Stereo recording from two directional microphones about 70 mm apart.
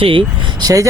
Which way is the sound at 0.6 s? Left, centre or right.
Right.